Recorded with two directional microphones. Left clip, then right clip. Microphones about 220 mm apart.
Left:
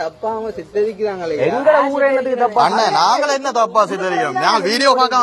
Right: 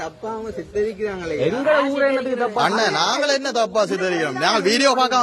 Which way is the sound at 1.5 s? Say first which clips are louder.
Left 5 dB; 50° right (ahead or behind).